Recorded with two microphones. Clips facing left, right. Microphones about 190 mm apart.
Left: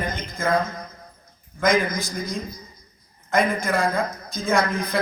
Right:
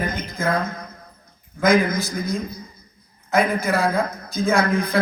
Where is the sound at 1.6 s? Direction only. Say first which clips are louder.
Right 3 dB; 55° right (ahead or behind).